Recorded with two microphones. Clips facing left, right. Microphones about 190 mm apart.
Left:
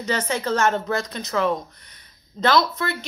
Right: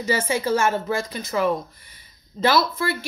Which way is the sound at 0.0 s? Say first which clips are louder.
Right 2 dB; 10° right (ahead or behind).